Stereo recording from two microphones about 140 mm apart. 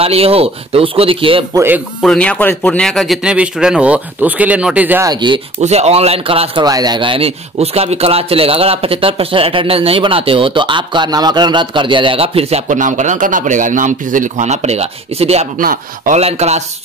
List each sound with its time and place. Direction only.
0.0 s speech: 45° right (ahead or behind)
1.5 s speech: 15° right (ahead or behind)
2.0 s speech: 10° left (ahead or behind); by 5.0 s 10° right (ahead or behind)
5.0 s speech: 35° right (ahead or behind)
5.6 s speech: 50° right (ahead or behind)
6.6 s speech: 30° right (ahead or behind); by 15.4 s 50° right (ahead or behind)
15.6 s speech: 90° right
16.2 s speech: 50° right (ahead or behind)